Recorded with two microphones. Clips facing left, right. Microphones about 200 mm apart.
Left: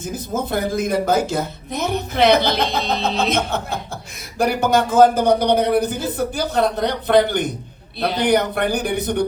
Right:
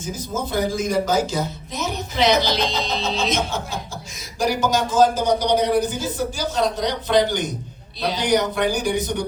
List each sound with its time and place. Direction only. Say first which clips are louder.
0.0 s speech: left 3 dB; 55° left (ahead or behind)